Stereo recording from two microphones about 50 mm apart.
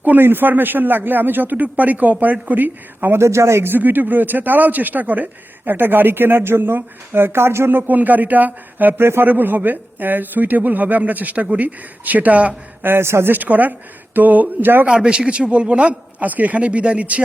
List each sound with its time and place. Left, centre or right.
0.0 s speech: right
3.2 s speech: right
3.7 s speech: right
12.8 s speech: right
13.3 s speech: right
14.8 s a man's voice: centre